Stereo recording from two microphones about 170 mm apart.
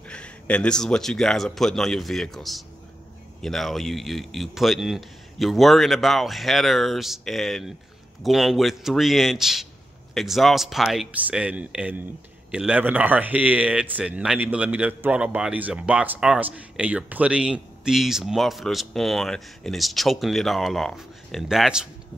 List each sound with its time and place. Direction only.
0.1 s a man's voice: 5° left (ahead or behind)